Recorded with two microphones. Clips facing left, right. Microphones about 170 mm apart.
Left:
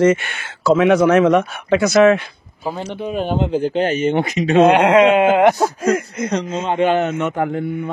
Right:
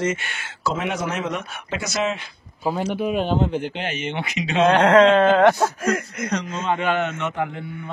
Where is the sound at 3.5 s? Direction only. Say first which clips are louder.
Left 9 dB; 40° left (ahead or behind).